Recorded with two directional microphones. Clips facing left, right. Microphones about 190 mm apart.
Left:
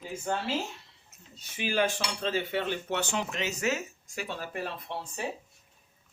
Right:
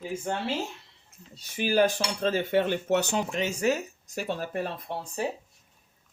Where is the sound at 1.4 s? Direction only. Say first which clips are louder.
Right 5 dB; 40° right (ahead or behind).